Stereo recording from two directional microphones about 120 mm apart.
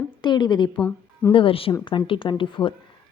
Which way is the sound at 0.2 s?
40° left (ahead or behind).